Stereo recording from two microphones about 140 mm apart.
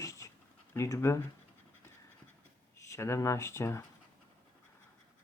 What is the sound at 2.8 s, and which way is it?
Speech, 20° left (ahead or behind).